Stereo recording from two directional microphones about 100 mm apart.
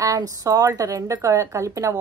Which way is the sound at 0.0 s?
35° right (ahead or behind).